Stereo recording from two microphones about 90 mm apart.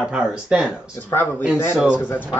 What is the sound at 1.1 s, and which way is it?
Speech, 35° left (ahead or behind).